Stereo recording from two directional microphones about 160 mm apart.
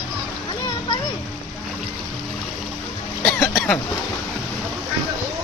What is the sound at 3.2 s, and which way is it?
Cough, 5° left (ahead or behind).